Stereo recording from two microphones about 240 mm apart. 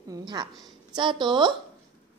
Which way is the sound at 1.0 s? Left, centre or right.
Centre.